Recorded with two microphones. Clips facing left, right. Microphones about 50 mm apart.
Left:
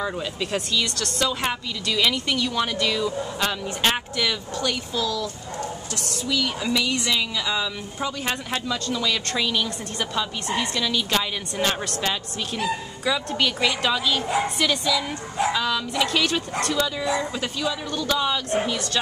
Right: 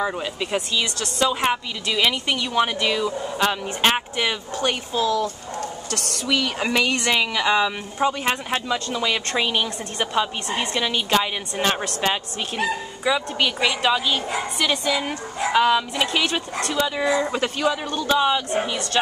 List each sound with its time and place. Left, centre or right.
0.0 s speech: centre; by 5.7 s right
5.9 s speech: right
8.0 s speech: right
13.0 s speech: centre
17.0 s speech: right
17.9 s speech: right